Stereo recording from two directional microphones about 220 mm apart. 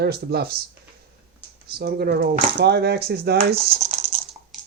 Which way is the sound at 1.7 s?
45° right (ahead or behind).